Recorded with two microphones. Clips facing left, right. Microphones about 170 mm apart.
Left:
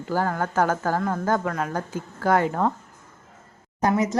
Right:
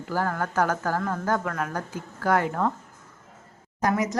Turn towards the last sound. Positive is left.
turn(degrees=30)  # may be behind; listen again after turning